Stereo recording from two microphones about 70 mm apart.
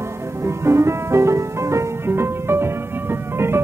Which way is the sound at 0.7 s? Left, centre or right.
Right.